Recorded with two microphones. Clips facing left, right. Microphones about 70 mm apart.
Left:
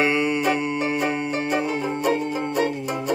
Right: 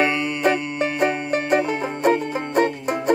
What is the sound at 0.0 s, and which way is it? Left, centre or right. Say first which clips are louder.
Music: right 1 dB; centre.